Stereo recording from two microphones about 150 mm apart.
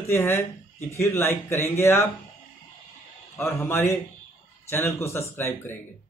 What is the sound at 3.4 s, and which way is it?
Speech, 15° left (ahead or behind).